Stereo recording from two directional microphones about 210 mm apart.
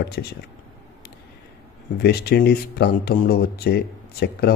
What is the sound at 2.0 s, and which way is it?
A man's voice, 50° left (ahead or behind).